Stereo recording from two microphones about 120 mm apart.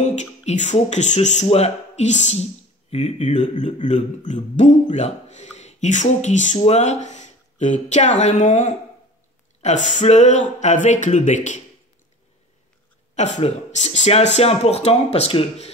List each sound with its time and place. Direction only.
0.0 s speech: 75° left (ahead or behind)
2.9 s speech: 60° left (ahead or behind); by 6.6 s 85° left
6.6 s speech: 70° left (ahead or behind)
10.6 s speech: 90° left
13.1 s speech: 75° left (ahead or behind); by 15.7 s 60° left (ahead or behind)